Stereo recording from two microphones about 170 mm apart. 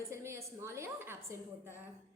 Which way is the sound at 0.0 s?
15° right (ahead or behind).